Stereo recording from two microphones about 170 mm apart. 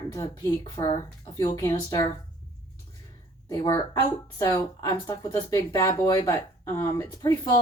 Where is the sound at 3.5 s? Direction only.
20° left (ahead or behind).